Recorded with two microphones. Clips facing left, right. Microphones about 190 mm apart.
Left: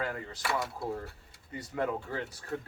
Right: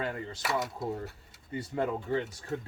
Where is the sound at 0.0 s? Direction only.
25° right (ahead or behind).